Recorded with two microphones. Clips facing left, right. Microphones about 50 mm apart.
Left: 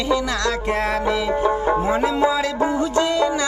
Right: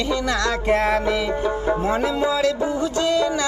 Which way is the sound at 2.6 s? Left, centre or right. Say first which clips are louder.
Left 3 dB; left.